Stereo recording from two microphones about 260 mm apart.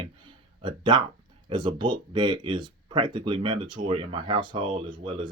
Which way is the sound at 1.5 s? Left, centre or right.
Centre.